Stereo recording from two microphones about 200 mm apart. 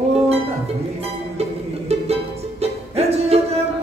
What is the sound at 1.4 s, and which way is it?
Music, 30° right (ahead or behind).